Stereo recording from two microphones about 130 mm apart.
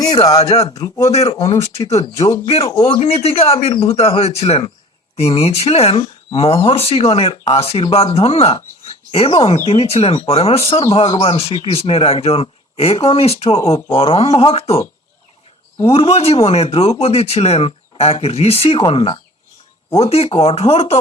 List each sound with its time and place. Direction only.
0.0 s a man's voice: 30° left (ahead or behind)
1.1 s speech: 55° left (ahead or behind)
15.9 s speech: 45° left (ahead or behind)